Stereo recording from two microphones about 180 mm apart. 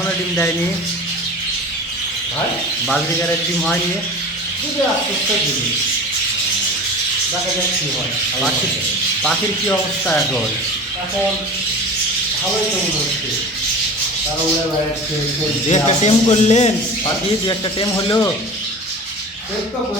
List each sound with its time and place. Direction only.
15.7 s speech: 35° left (ahead or behind)
17.4 s speech: 25° left (ahead or behind)